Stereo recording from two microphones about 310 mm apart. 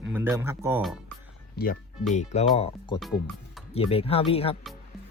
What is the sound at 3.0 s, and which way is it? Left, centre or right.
Speech, centre.